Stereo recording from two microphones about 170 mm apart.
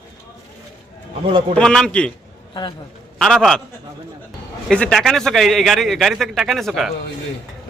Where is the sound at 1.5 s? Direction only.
5° left (ahead or behind).